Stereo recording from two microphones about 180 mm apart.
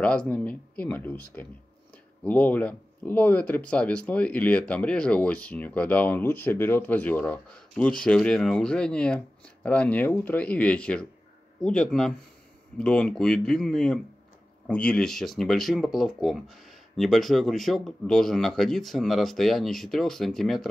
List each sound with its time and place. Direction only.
0.0 s speech: 5° left (ahead or behind)